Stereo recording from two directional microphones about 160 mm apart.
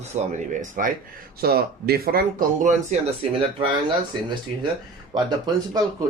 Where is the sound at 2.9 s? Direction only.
45° right (ahead or behind).